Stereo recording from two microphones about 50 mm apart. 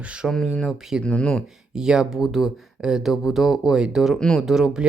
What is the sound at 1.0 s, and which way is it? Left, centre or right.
Speech, left.